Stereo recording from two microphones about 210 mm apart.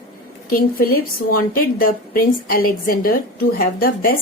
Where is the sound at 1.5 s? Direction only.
45° left (ahead or behind).